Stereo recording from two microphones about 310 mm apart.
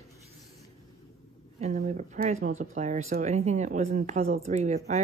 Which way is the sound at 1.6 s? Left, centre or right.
Right.